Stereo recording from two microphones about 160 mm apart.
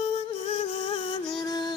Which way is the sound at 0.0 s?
40° left (ahead or behind).